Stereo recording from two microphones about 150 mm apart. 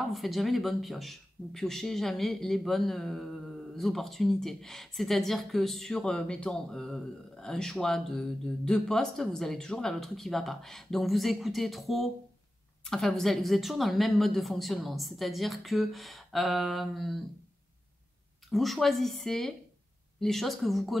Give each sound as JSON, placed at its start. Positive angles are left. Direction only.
{"t": 0.0, "sound": "speech", "side_deg": 0}
{"t": 18.5, "sound": "speech", "side_deg": 0}